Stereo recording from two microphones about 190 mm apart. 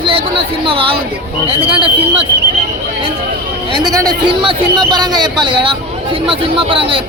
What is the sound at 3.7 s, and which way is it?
Speech, 20° right (ahead or behind).